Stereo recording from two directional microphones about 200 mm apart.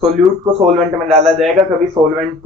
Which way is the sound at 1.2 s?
Centre (ahead or behind).